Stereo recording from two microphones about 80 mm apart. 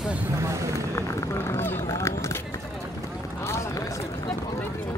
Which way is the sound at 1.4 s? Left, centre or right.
Left.